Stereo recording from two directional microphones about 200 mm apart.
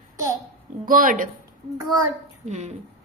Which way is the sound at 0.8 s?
45° right (ahead or behind).